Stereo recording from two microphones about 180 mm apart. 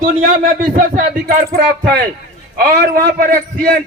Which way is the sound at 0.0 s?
50° right (ahead or behind).